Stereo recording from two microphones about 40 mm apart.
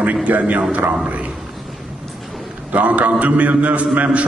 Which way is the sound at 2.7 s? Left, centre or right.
Right.